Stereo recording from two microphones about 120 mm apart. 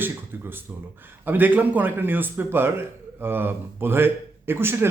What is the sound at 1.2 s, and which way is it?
A man's voice, 15° right (ahead or behind).